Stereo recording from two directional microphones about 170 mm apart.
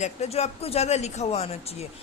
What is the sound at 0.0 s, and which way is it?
Speech, 40° left (ahead or behind).